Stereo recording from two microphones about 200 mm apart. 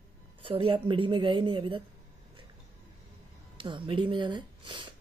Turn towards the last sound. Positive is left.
turn(degrees=-25)  # may be behind; listen again after turning